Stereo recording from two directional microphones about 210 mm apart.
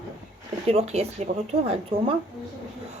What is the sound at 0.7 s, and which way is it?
Speech, 30° right (ahead or behind).